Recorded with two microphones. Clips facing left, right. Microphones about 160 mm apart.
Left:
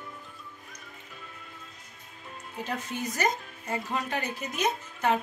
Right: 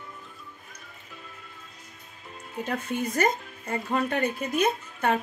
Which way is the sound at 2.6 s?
55° right (ahead or behind).